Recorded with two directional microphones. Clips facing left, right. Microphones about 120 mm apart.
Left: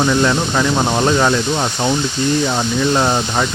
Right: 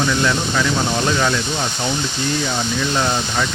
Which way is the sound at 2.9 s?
35° left (ahead or behind).